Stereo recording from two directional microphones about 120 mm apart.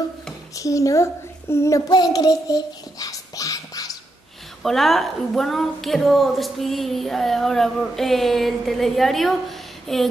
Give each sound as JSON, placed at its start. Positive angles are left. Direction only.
{"t": 0.6, "sound": "a child's voice", "side_deg": 25}
{"t": 4.6, "sound": "a woman's voice", "side_deg": 0}